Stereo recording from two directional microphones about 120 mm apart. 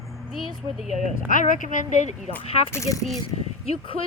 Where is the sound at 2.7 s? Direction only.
25° left (ahead or behind).